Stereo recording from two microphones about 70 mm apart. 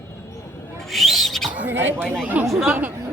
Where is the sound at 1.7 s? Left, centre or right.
Right.